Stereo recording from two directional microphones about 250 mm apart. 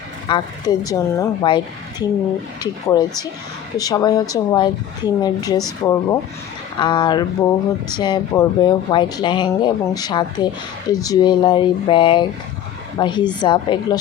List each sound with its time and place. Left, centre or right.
0.3 s speech: centre